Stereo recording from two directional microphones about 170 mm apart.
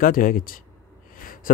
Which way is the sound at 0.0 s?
55° left (ahead or behind).